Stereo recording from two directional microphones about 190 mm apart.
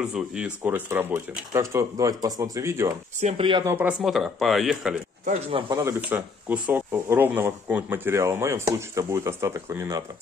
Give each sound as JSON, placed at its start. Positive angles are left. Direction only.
{"t": 0.0, "sound": "speech", "side_deg": -5}
{"t": 3.2, "sound": "speech", "side_deg": -35}
{"t": 3.6, "sound": "speech", "side_deg": -10}
{"t": 5.5, "sound": "speech", "side_deg": -20}